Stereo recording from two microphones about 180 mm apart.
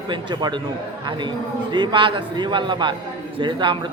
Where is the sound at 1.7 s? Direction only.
25° right (ahead or behind).